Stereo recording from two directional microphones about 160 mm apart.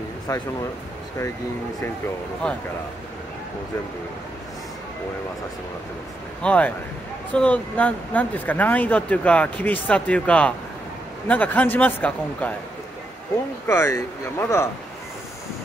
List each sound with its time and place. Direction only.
0.3 s speech: 20° left (ahead or behind)
2.4 s speech: 5° left (ahead or behind)
6.4 s speech: 10° left (ahead or behind)
13.7 s speech: 15° left (ahead or behind)